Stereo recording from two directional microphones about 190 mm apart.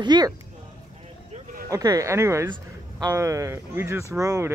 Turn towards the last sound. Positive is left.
turn(degrees=-15)  # may be behind; listen again after turning